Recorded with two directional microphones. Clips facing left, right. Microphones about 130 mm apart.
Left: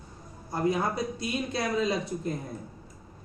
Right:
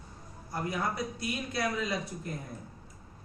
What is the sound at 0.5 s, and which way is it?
Speech, 25° left (ahead or behind).